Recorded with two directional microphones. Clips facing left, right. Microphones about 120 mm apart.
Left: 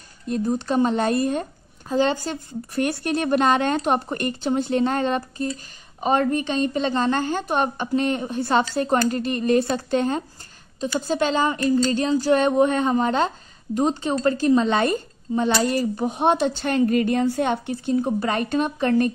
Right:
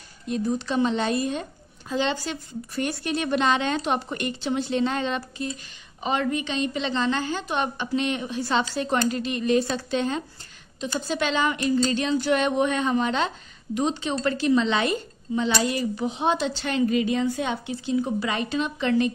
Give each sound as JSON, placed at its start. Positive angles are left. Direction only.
{"t": 0.3, "sound": "speech", "side_deg": 45}